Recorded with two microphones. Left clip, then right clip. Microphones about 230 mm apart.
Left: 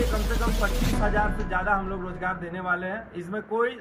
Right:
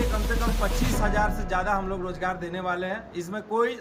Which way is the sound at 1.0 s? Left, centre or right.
Right.